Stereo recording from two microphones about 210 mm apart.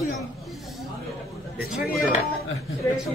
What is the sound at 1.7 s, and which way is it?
Speech, centre (ahead or behind).